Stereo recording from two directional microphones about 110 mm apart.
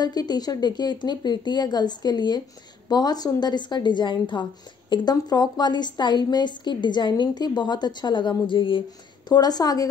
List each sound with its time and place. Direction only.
0.0 s a woman's voice: 35° left (ahead or behind)
9.3 s a woman's voice: 35° left (ahead or behind)